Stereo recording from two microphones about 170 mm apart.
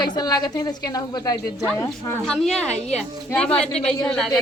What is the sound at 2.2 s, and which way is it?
A woman's voice, 5° left (ahead or behind).